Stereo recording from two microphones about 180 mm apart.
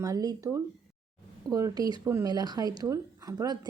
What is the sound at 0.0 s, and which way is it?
Speech, 20° right (ahead or behind).